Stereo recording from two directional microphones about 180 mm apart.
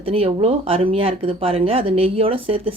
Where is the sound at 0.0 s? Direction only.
30° right (ahead or behind).